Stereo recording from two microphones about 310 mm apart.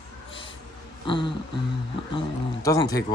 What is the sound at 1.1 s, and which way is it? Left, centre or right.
Speech, centre.